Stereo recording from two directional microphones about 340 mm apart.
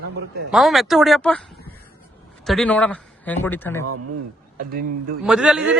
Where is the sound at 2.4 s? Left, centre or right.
Centre.